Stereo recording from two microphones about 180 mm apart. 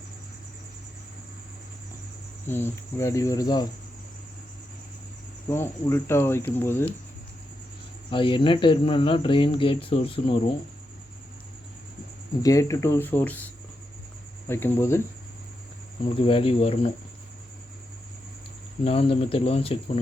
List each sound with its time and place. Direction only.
2.5 s speech: 10° left (ahead or behind)
5.5 s speech: 15° left (ahead or behind)
8.1 s speech: 25° left (ahead or behind)
12.4 s speech: 20° left (ahead or behind)
14.4 s speech: 15° left (ahead or behind)
16.2 s speech: 30° left (ahead or behind)
18.9 s speech: 35° left (ahead or behind)